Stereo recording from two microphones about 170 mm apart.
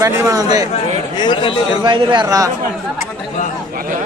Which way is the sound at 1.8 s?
25° right (ahead or behind).